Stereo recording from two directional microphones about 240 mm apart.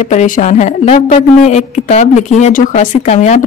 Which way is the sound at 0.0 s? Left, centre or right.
Left.